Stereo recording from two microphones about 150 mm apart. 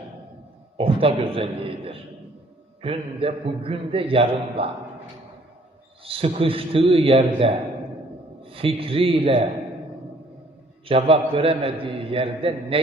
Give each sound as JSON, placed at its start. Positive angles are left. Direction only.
{"t": 0.8, "sound": "a man's voice", "side_deg": -40}
{"t": 6.1, "sound": "a man's voice", "side_deg": -40}
{"t": 10.8, "sound": "a man's voice", "side_deg": -40}